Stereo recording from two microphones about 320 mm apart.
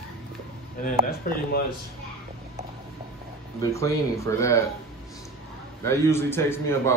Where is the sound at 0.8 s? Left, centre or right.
Left.